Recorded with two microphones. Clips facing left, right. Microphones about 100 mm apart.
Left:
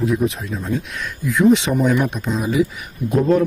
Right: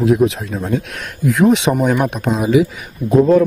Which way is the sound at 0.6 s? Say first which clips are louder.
Right 3 dB; 65° right (ahead or behind).